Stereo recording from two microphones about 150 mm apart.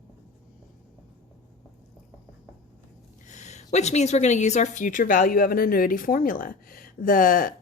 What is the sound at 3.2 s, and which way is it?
A woman's voice, 50° left (ahead or behind).